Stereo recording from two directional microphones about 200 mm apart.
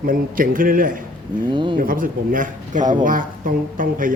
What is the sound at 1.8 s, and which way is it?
Speech, 45° right (ahead or behind).